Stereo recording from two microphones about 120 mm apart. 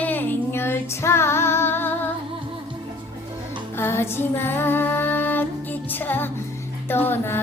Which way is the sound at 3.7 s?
20° left (ahead or behind).